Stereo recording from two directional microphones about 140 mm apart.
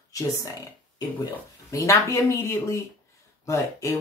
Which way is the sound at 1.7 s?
20° left (ahead or behind).